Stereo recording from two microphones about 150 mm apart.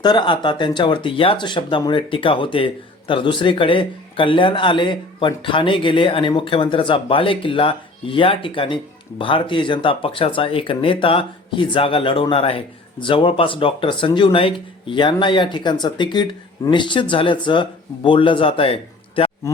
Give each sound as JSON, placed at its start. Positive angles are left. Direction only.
{"t": 0.0, "sound": "speech", "side_deg": 30}